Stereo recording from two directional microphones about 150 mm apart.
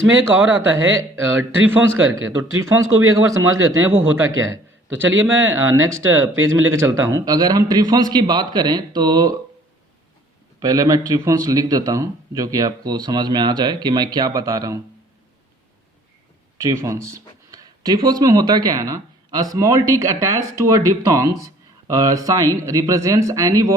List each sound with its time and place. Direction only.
0.9 s a man's voice: 15° right (ahead or behind)
10.6 s a man's voice: 25° right (ahead or behind)
16.6 s a man's voice: 20° right (ahead or behind)